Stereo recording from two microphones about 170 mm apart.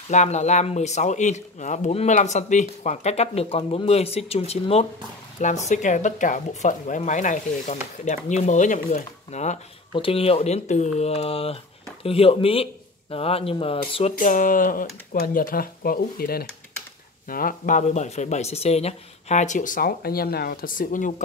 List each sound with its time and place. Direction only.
0.1 s speech: 45° left (ahead or behind)
9.9 s speech: 35° left (ahead or behind)
14.1 s speech: 50° left (ahead or behind)